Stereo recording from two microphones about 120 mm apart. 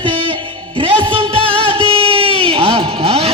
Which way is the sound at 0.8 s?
45° right (ahead or behind).